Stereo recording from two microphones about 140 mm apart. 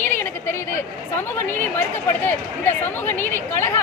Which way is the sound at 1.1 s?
15° left (ahead or behind).